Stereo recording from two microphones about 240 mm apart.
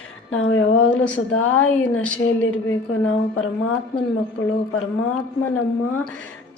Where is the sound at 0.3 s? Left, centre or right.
Left.